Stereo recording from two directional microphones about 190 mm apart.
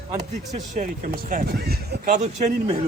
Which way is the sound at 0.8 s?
40° right (ahead or behind).